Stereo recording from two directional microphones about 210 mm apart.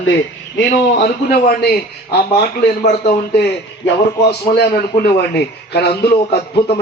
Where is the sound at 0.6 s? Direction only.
50° left (ahead or behind).